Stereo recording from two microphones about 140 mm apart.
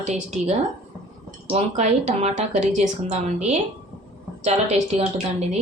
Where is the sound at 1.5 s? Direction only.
55° right (ahead or behind).